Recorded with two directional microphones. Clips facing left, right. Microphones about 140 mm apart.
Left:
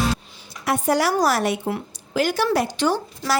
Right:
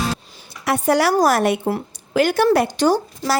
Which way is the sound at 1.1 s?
50° right (ahead or behind).